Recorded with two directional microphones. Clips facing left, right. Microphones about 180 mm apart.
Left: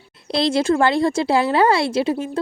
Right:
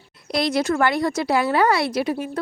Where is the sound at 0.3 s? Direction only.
25° left (ahead or behind).